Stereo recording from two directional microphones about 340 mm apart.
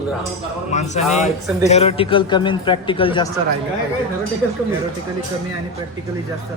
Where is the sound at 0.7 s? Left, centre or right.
Centre.